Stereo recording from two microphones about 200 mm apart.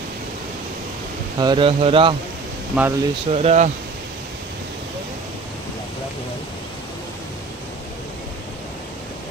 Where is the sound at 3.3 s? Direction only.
35° right (ahead or behind).